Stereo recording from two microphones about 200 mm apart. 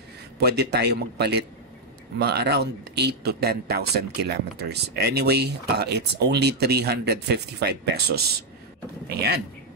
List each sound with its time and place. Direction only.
0.4 s speech: 55° right (ahead or behind)